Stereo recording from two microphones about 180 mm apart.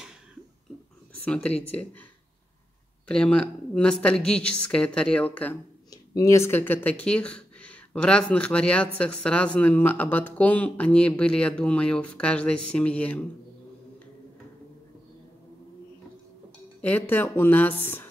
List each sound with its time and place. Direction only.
1.2 s speech: 5° left (ahead or behind)
3.1 s a woman's voice: 5° left (ahead or behind)
16.8 s speech: 10° left (ahead or behind)